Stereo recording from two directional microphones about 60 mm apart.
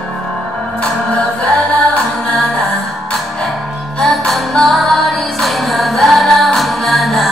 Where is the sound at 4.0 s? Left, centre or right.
Centre.